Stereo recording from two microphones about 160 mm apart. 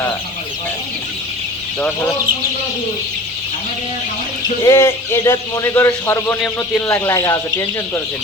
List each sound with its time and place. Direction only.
4.6 s a man's voice: 15° left (ahead or behind)